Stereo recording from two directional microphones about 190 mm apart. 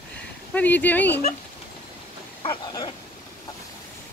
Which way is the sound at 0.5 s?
10° left (ahead or behind).